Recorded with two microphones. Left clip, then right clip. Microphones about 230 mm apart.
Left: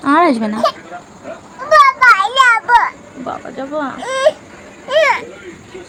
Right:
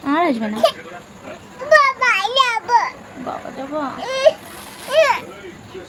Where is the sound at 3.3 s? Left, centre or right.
Centre.